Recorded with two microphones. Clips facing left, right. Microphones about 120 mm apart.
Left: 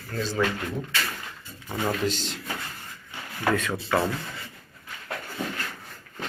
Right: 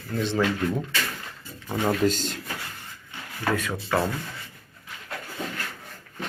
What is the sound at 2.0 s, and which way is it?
Speech, 45° right (ahead or behind).